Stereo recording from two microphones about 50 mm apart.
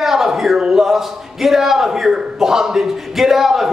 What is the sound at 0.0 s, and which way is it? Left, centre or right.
A man's voice, centre.